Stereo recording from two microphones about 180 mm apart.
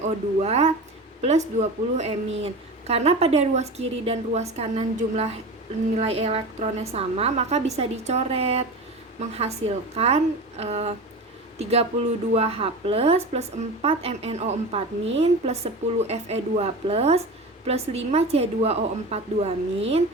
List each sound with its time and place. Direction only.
0.0 s a woman's voice: 35° right (ahead or behind)